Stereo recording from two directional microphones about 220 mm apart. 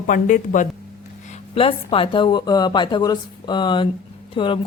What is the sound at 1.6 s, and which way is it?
A woman's voice, 25° left (ahead or behind).